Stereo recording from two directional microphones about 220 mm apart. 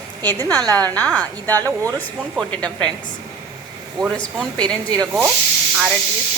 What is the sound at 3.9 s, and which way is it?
A woman's voice, centre (ahead or behind).